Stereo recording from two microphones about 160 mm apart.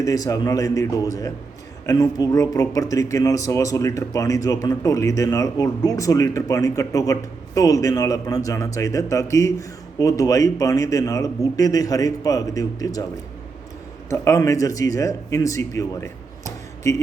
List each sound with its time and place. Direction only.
0.0 s speech: 20° left (ahead or behind)
14.1 s a man's voice: 20° left (ahead or behind)